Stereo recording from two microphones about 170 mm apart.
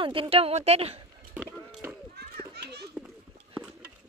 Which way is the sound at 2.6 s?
75° right (ahead or behind).